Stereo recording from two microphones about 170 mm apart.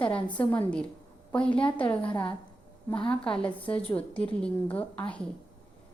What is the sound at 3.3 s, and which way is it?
A woman's voice, 5° left (ahead or behind).